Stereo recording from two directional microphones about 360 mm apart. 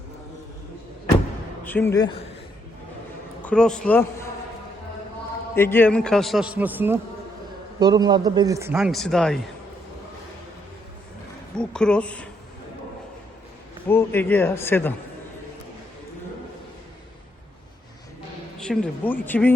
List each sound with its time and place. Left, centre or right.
1.6 s a man's voice: centre
3.4 s speech: centre
5.5 s a man's voice: centre
11.5 s a man's voice: centre
13.8 s a man's voice: centre
18.6 s a man's voice: centre